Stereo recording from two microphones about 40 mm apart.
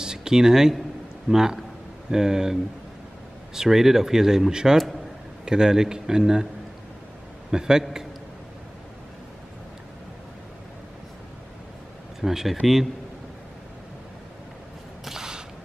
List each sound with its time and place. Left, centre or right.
0.0 s speech: centre
7.5 s speech: centre
12.2 s speech: centre
15.0 s mechanisms: centre